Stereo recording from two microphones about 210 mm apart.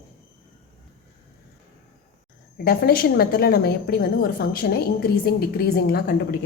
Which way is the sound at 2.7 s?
45° left (ahead or behind).